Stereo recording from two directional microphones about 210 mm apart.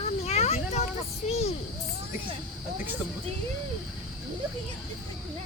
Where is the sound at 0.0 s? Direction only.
30° left (ahead or behind).